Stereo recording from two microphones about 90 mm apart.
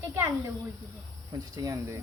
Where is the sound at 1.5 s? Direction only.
35° right (ahead or behind).